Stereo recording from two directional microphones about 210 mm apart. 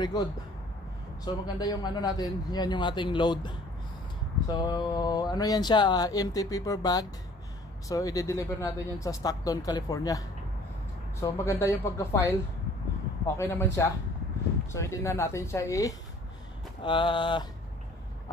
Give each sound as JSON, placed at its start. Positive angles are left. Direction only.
{"t": 0.0, "sound": "speech", "side_deg": 20}
{"t": 13.4, "sound": "speech", "side_deg": 15}